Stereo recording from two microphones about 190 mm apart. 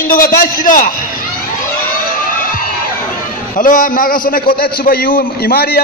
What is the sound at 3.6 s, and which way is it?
A man's voice, 45° left (ahead or behind).